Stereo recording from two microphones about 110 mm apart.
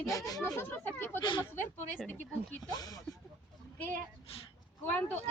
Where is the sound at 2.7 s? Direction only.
35° left (ahead or behind).